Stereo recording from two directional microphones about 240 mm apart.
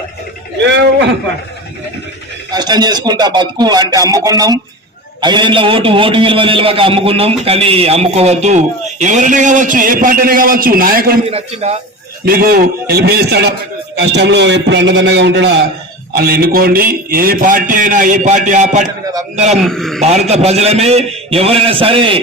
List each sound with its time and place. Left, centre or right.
2.5 s a man's voice: centre; by 11.2 s right
11.3 s a man's voice: right
12.2 s a man's voice: right
19.6 s a man's voice: centre
20.0 s a man's voice: right